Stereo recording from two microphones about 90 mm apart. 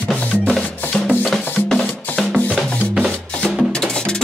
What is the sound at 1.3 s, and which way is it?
Music, 5° left (ahead or behind).